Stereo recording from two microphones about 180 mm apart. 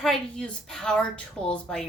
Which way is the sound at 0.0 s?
5° left (ahead or behind).